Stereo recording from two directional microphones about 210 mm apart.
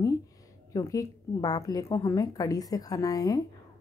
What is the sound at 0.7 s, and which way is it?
A woman's voice, 15° left (ahead or behind).